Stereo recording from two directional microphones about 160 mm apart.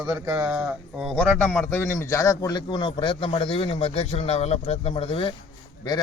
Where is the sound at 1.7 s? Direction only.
15° left (ahead or behind).